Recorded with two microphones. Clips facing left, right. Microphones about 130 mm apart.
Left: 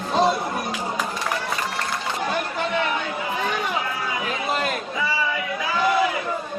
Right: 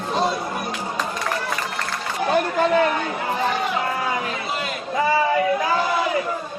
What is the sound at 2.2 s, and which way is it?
Chatter, 40° right (ahead or behind).